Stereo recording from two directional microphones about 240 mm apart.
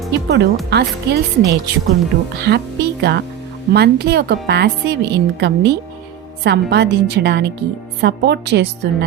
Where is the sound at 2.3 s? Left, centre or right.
Right.